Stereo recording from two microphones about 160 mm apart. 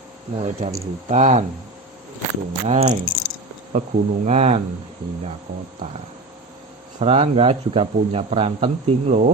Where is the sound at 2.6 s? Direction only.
45° right (ahead or behind).